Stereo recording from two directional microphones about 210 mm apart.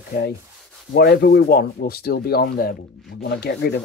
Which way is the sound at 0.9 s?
50° left (ahead or behind).